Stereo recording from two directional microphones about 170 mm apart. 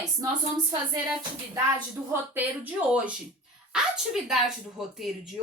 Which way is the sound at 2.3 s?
10° right (ahead or behind).